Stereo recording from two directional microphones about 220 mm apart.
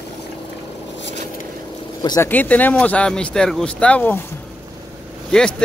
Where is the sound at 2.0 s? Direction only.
15° left (ahead or behind).